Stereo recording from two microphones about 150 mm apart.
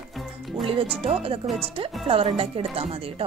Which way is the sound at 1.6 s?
40° right (ahead or behind).